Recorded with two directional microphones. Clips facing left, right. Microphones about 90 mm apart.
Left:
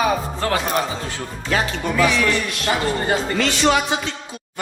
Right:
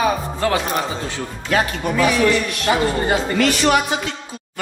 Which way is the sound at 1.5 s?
35° right (ahead or behind).